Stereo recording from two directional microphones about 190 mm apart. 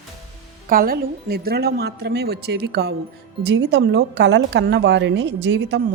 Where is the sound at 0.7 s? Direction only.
50° right (ahead or behind).